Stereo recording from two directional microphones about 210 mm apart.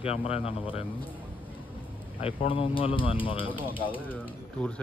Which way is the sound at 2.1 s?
25° left (ahead or behind).